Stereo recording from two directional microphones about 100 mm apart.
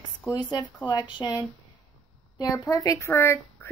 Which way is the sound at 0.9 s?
45° left (ahead or behind).